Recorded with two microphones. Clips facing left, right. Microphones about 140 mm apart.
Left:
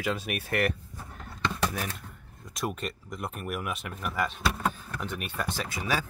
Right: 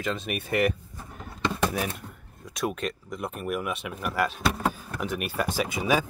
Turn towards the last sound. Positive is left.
turn(degrees=-15)  # may be behind; listen again after turning